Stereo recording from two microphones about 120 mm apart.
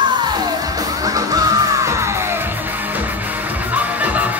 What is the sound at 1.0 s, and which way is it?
Music, 30° right (ahead or behind).